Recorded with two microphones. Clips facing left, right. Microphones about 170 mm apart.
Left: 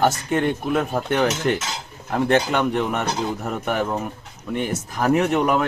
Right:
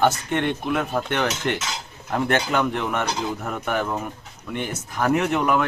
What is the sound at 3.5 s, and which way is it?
Speech, 5° left (ahead or behind).